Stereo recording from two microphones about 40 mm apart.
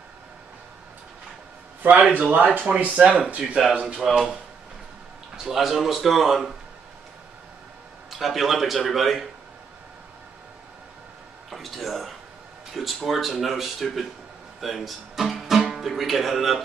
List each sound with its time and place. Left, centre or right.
1.8 s speech: right
4.0 s speech: centre
5.4 s speech: centre
8.1 s speech: centre
11.5 s speech: centre
14.6 s music: centre
15.7 s speech: centre